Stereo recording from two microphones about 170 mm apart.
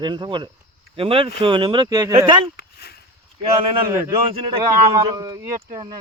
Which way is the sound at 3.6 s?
30° right (ahead or behind).